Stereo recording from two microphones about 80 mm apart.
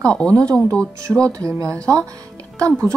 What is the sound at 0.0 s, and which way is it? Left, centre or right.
Speech, centre.